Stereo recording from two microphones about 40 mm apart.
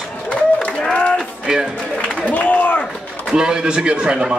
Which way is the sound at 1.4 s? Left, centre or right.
Centre.